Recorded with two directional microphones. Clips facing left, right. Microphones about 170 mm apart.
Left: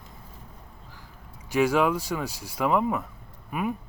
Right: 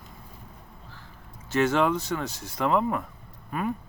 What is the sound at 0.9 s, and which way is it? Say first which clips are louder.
Speech: even; 15° left (ahead or behind).